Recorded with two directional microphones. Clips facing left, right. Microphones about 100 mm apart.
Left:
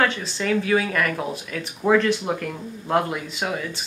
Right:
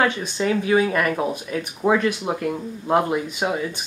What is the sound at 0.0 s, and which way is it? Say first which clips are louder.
Speech: right 2 dB; 20° right (ahead or behind).